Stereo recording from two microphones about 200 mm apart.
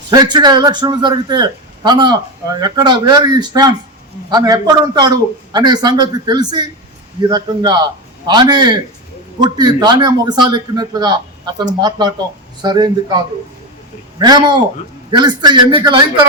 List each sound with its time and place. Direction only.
0.1 s a man's voice: 20° right (ahead or behind)